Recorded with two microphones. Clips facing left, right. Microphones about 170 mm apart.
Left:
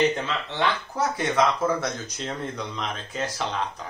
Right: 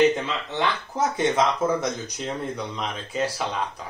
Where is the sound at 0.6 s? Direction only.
25° right (ahead or behind).